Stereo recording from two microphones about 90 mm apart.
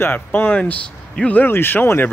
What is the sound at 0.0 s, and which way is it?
Speech, 25° left (ahead or behind).